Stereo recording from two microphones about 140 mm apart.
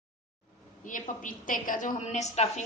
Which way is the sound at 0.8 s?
70° left (ahead or behind).